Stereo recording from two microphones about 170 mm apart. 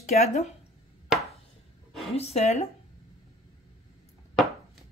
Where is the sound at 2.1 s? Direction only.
40° left (ahead or behind).